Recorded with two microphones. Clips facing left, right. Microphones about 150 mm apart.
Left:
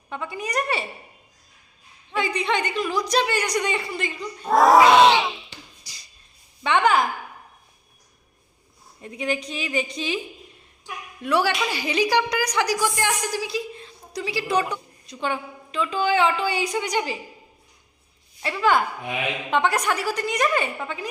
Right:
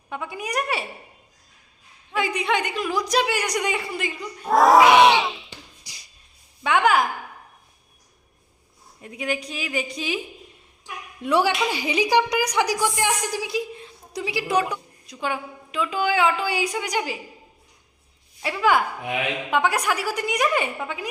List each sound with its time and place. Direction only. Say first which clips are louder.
0.1 s a woman's voice: even; 10° right (ahead or behind)
2.0 s a woman's voice: even; 10° right (ahead or behind)
4.9 s a woman's voice: even; 10° right (ahead or behind)
5.1 s music: even; centre (ahead or behind)
5.8 s a sound: right 1 dB; 15° right (ahead or behind)
6.6 s a woman's voice: even; 5° right (ahead or behind)
9.0 s a woman's voice: left 1 dB; 5° right (ahead or behind)
11.2 s a woman's voice: right 1 dB; 20° right (ahead or behind)
18.4 s a woman's voice: even; 10° right (ahead or behind)